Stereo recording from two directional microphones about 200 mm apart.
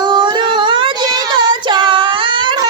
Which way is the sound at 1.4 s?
25° right (ahead or behind).